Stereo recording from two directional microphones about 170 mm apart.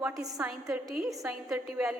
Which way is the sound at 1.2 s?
5° right (ahead or behind).